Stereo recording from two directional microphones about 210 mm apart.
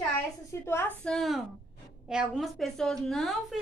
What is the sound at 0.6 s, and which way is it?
A woman's voice, 10° left (ahead or behind).